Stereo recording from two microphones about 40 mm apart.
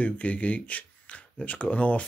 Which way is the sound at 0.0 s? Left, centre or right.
Left.